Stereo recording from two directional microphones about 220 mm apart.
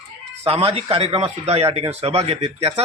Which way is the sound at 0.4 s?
25° right (ahead or behind).